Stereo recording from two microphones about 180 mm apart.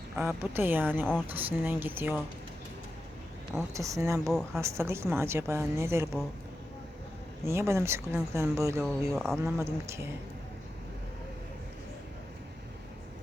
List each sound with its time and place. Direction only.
0.2 s a woman's voice: 10° right (ahead or behind)
3.8 s a woman's voice: 15° right (ahead or behind)
4.3 s speech: centre (ahead or behind)
4.6 s a woman's voice: 15° right (ahead or behind)
7.4 s a woman's voice: 15° right (ahead or behind)
8.8 s speech: 5° left (ahead or behind)
9.4 s a woman's voice: 15° right (ahead or behind)